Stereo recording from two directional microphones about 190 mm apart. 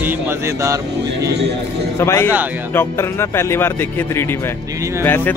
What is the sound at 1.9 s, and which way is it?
Speech, 15° left (ahead or behind).